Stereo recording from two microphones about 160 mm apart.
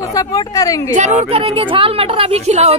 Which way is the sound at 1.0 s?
40° right (ahead or behind).